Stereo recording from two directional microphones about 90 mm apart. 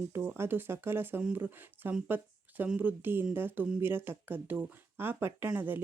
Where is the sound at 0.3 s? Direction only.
25° right (ahead or behind).